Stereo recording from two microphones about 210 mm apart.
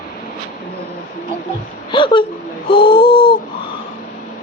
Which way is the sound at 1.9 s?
25° left (ahead or behind).